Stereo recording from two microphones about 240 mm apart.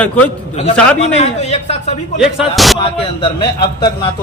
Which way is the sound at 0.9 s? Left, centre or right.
Left.